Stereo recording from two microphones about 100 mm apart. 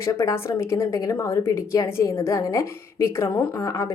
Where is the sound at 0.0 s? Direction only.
30° left (ahead or behind).